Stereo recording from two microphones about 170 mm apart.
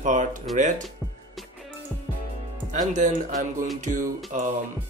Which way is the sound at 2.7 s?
45° right (ahead or behind).